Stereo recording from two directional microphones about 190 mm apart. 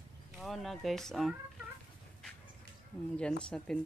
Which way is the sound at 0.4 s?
Centre (ahead or behind).